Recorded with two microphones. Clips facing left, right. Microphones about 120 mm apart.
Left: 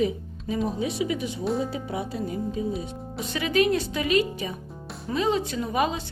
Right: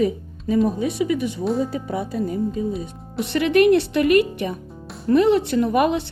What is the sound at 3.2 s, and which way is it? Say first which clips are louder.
Speech: right 7 dB; 65° right (ahead or behind).